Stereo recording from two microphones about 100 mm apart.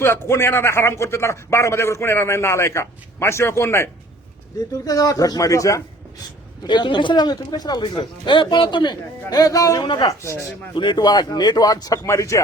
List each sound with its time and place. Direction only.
0.0 s a man's voice: 25° left (ahead or behind)
4.9 s speech: 35° left (ahead or behind)
6.7 s speech: 50° left (ahead or behind)
7.9 s speech: 55° left (ahead or behind)
9.3 s speech: 35° left (ahead or behind)
9.8 s speech: 50° left (ahead or behind)
12.0 s a man's voice: 30° left (ahead or behind)